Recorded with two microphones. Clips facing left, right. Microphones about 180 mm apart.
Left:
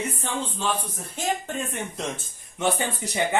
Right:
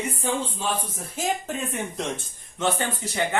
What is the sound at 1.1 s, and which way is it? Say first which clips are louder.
Speech: even; centre (ahead or behind).